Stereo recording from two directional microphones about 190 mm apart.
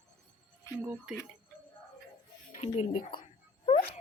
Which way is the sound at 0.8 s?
10° right (ahead or behind).